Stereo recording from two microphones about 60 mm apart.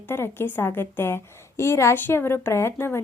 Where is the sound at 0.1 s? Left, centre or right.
Left.